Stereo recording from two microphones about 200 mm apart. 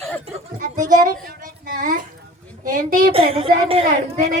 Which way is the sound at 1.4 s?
40° right (ahead or behind).